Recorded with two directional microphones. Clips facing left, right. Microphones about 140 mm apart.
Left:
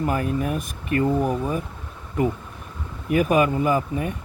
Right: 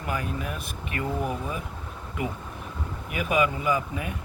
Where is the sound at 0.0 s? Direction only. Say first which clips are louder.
Left 7 dB; 45° left (ahead or behind).